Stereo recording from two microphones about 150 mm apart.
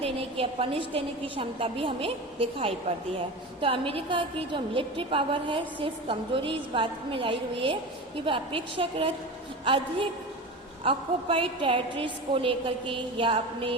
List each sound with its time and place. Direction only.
0.0 s a woman's voice: 40° right (ahead or behind)